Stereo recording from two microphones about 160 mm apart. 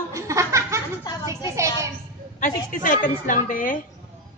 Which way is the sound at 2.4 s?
55° left (ahead or behind).